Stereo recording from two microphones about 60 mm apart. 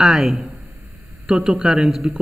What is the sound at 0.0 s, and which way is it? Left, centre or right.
Speech, centre.